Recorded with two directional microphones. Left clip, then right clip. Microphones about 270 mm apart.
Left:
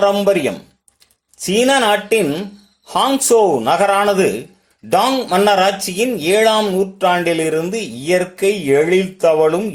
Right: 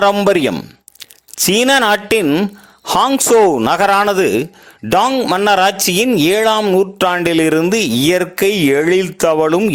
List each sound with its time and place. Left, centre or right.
0.0 s speech: right